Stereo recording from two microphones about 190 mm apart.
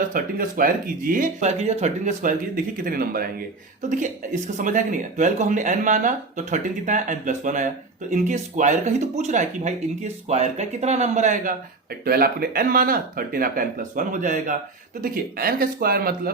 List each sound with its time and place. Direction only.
0.1 s speech: 45° right (ahead or behind)
2.8 s speech: 50° right (ahead or behind)
4.5 s speech: 45° right (ahead or behind)
12.0 s speech: 50° right (ahead or behind)